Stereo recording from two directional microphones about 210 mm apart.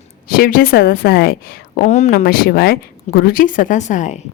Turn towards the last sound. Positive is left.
turn(degrees=35)  # may be behind; listen again after turning